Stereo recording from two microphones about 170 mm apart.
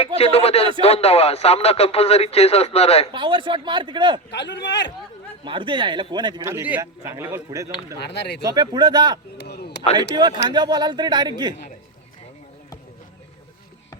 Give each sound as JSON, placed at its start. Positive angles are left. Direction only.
{"t": 0.2, "sound": "speech", "side_deg": 35}
{"t": 3.1, "sound": "speech", "side_deg": -30}
{"t": 4.3, "sound": "a man's voice", "side_deg": 90}
{"t": 5.5, "sound": "speech", "side_deg": -30}
{"t": 6.5, "sound": "a man's voice", "side_deg": -10}
{"t": 8.0, "sound": "speech", "side_deg": 80}
{"t": 8.4, "sound": "speech", "side_deg": -25}
{"t": 9.4, "sound": "a sound", "side_deg": 70}
{"t": 9.9, "sound": "speech", "side_deg": -25}